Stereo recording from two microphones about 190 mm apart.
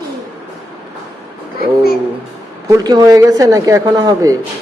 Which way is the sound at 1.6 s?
55° left (ahead or behind).